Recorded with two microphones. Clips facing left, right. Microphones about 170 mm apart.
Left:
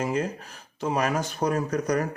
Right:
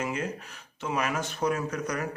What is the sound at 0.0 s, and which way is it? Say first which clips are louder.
Speech: left 4 dB; 35° left (ahead or behind).